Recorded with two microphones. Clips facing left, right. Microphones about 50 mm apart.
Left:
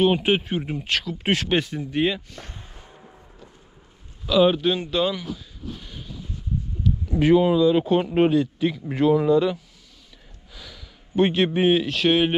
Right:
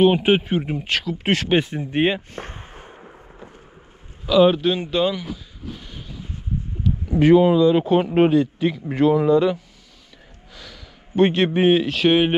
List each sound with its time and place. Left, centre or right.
0.0 s speech: centre
1.6 s a sound: right
4.3 s speech: centre
6.8 s a sound: centre
7.4 s speech: centre
10.5 s speech: centre